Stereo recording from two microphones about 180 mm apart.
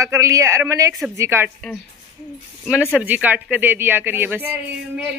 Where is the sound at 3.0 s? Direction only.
10° right (ahead or behind).